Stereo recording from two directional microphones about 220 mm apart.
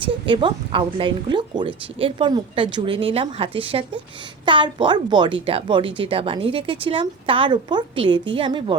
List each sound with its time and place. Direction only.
0.0 s a woman's voice: 20° right (ahead or behind)